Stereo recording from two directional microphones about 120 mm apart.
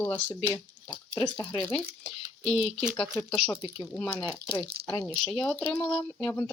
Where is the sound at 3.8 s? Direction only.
15° left (ahead or behind).